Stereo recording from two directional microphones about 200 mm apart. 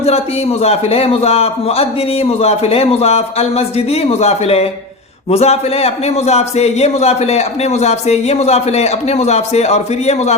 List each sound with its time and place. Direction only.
0.6 s a man's voice: 30° left (ahead or behind)